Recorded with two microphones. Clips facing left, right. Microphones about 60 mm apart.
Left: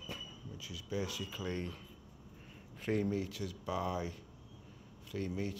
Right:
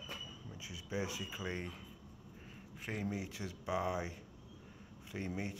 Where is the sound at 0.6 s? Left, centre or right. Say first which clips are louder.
Left 1 dB; right.